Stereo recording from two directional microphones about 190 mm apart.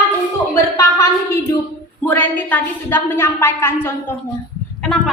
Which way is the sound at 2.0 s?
10° left (ahead or behind).